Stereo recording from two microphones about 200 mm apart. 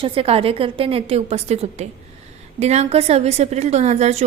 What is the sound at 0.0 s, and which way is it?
A woman's voice, 25° right (ahead or behind).